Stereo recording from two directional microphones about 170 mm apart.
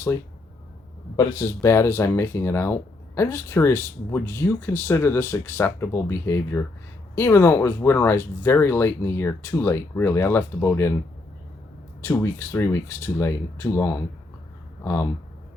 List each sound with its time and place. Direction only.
1.1 s speech: 20° left (ahead or behind)
12.0 s speech: 15° left (ahead or behind)